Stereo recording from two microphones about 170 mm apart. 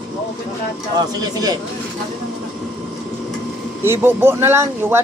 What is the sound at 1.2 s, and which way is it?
Speech, 20° right (ahead or behind).